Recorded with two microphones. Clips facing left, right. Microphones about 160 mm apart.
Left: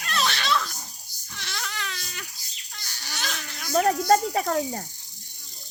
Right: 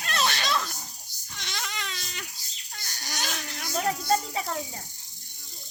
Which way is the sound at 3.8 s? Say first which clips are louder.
Left 5 dB; 50° left (ahead or behind).